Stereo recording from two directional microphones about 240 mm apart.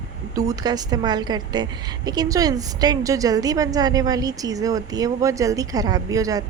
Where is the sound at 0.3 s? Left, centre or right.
Centre.